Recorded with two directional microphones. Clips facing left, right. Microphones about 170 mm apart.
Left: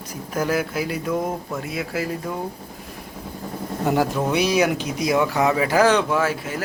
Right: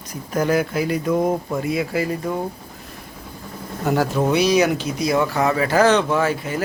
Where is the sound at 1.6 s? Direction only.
Centre (ahead or behind).